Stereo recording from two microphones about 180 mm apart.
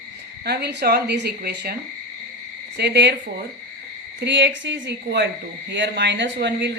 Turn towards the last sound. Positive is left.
turn(degrees=-75)  # may be behind; listen again after turning